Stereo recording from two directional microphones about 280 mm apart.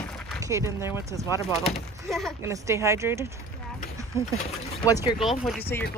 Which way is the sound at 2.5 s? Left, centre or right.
Centre.